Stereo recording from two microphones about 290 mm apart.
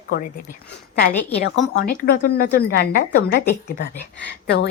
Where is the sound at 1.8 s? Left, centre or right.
Left.